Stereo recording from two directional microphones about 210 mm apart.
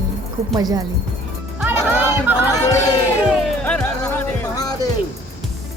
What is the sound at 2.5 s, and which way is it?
Speech, 15° left (ahead or behind).